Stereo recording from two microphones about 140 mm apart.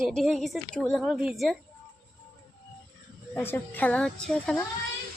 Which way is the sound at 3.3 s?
15° left (ahead or behind).